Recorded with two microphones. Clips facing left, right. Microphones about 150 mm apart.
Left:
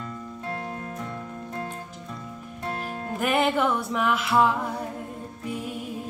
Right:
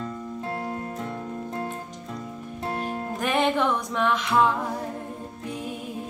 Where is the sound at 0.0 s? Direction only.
25° right (ahead or behind).